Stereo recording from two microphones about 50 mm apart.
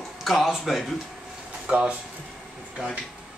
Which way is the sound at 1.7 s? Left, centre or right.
Centre.